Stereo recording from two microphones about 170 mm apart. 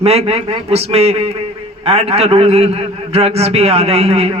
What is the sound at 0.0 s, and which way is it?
A man's voice, 40° right (ahead or behind).